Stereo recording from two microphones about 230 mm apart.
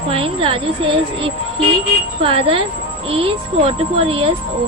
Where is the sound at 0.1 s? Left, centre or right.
Right.